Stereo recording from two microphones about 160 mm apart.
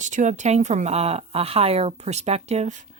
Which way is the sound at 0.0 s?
50° right (ahead or behind).